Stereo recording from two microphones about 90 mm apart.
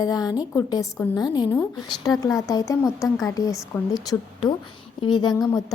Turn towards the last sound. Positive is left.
turn(degrees=50)  # may be behind; listen again after turning